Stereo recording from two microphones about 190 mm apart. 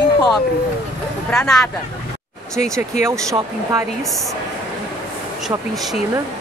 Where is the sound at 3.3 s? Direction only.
15° right (ahead or behind).